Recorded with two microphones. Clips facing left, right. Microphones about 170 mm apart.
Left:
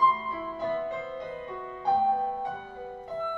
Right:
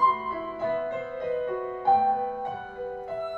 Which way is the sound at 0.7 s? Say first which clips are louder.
Right 2 dB; 55° right (ahead or behind).